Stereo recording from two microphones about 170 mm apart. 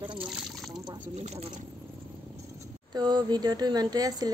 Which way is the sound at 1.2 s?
40° right (ahead or behind).